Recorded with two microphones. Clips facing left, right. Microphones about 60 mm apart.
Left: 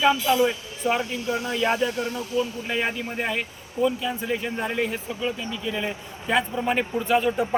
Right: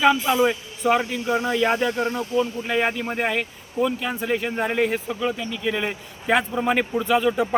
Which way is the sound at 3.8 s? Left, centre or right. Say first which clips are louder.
Even; right.